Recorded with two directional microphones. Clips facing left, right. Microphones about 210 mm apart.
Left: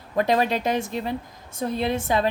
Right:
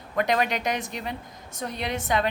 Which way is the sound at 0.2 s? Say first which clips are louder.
Left 3 dB; 30° left (ahead or behind).